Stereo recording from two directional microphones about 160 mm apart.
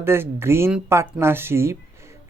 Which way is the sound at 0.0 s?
15° right (ahead or behind).